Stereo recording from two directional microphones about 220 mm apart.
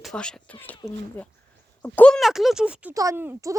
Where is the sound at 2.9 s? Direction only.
15° right (ahead or behind).